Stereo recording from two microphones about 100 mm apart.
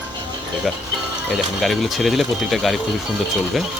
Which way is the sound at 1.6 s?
Centre (ahead or behind).